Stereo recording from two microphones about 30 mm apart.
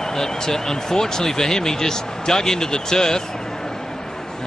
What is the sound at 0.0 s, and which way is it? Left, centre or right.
Speech, centre.